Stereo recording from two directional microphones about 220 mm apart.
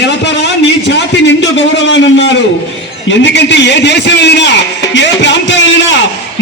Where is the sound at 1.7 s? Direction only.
55° left (ahead or behind).